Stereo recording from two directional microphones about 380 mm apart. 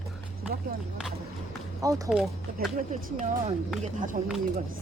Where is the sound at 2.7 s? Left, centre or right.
Centre.